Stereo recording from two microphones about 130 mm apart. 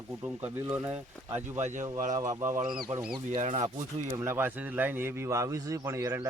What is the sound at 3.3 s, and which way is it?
Speech, 65° right (ahead or behind).